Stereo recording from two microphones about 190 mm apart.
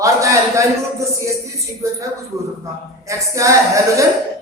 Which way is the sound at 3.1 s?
15° right (ahead or behind).